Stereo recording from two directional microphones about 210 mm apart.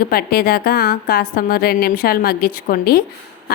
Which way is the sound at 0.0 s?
45° left (ahead or behind).